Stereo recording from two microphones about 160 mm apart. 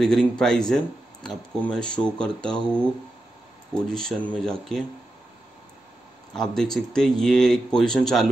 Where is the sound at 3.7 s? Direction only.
5° left (ahead or behind).